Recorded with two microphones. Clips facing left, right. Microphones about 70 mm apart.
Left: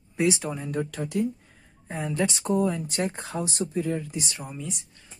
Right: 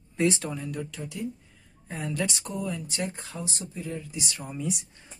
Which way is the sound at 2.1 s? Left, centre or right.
Left.